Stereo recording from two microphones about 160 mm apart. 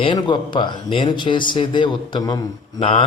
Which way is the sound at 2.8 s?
35° left (ahead or behind).